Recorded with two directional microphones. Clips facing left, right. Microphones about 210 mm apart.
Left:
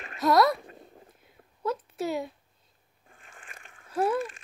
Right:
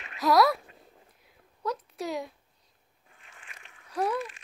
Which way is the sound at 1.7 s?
Centre (ahead or behind).